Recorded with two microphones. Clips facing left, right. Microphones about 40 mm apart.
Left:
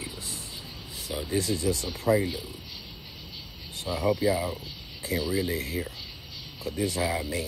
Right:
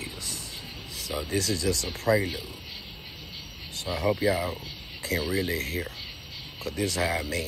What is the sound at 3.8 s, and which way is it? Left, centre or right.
Speech, right.